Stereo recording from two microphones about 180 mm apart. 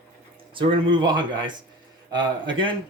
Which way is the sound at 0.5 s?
25° right (ahead or behind).